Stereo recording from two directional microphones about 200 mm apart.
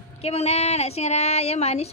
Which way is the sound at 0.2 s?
30° left (ahead or behind).